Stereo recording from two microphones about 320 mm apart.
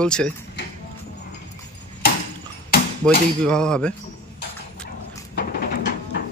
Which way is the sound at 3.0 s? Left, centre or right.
Centre.